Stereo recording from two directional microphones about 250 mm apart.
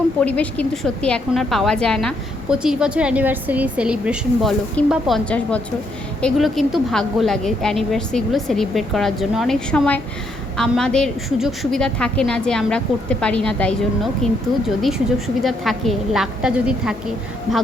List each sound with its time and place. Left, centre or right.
0.2 s a woman's voice: centre